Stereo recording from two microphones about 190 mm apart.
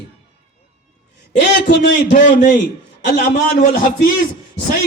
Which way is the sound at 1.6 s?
65° left (ahead or behind).